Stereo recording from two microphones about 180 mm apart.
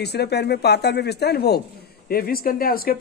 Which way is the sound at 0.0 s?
65° left (ahead or behind).